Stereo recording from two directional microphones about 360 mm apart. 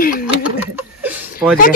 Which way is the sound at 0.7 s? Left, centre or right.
Centre.